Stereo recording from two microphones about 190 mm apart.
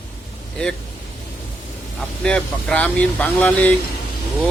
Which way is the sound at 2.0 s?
5° left (ahead or behind).